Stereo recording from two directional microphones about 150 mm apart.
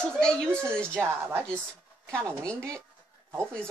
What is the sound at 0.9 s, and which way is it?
Speech, 15° right (ahead or behind).